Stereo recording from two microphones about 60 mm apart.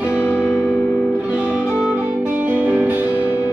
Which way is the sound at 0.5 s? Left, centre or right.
Left.